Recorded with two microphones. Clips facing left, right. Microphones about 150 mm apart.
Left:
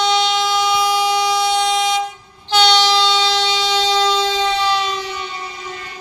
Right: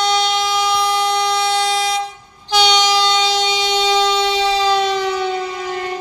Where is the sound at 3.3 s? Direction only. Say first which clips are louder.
Right 1 dB; 45° right (ahead or behind).